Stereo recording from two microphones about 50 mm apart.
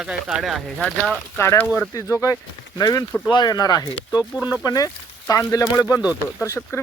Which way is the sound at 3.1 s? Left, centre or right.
Left.